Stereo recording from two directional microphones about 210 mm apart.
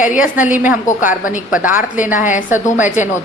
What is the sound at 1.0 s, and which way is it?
Speech, 40° left (ahead or behind).